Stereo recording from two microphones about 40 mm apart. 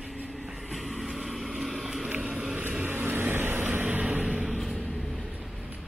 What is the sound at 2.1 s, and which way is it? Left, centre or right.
Vehicle, right.